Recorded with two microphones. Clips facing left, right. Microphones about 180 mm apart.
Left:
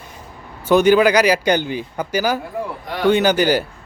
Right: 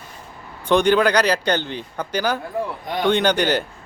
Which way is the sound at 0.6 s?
5° left (ahead or behind).